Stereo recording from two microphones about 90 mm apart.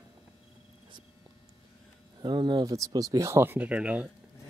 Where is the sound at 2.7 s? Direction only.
40° right (ahead or behind).